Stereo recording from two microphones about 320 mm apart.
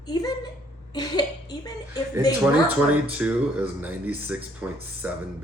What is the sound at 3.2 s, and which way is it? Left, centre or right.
Speech, centre.